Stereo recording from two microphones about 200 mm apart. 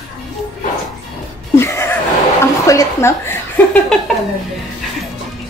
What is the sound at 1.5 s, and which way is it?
Chuckle, 10° left (ahead or behind).